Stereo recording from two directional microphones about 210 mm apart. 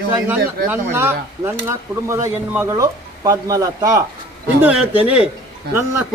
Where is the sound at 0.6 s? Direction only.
10° right (ahead or behind).